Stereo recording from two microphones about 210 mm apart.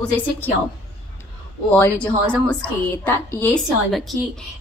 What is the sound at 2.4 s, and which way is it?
A woman's voice, 5° left (ahead or behind).